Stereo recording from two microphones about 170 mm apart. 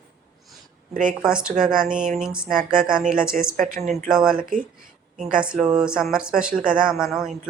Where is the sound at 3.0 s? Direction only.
55° right (ahead or behind).